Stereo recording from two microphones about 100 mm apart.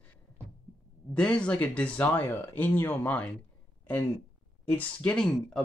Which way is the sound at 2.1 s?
25° left (ahead or behind).